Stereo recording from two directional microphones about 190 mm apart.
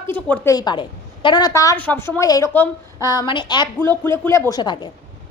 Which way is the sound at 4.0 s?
10° left (ahead or behind).